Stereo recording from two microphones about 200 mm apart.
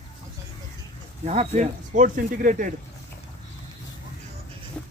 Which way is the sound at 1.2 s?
35° right (ahead or behind).